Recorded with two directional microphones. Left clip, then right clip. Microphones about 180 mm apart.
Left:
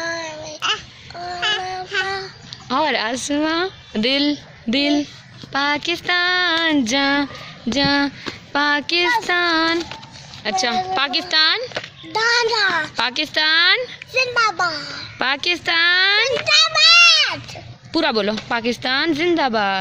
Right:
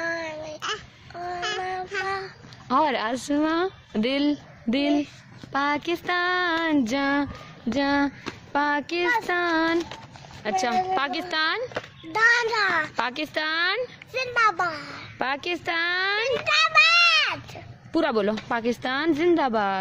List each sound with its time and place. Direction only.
0.0 s child singing: 15° right (ahead or behind)
2.0 s a child's voice: 10° right (ahead or behind)
12.1 s a child's voice: 10° right (ahead or behind)
15.1 s a child's voice: 10° right (ahead or behind)